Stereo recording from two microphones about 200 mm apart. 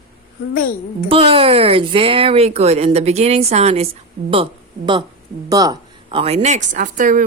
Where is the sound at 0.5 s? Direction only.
45° left (ahead or behind).